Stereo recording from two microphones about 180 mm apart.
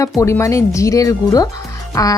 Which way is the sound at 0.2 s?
15° left (ahead or behind).